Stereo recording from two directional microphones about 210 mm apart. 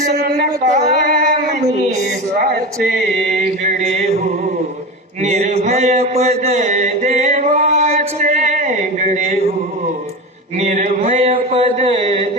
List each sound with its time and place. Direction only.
0.1 s a sound: 50° right (ahead or behind)
2.4 s speech: 45° right (ahead or behind)
3.6 s chant: 35° right (ahead or behind)
5.2 s mantra: 35° right (ahead or behind)
10.6 s mantra: 35° right (ahead or behind)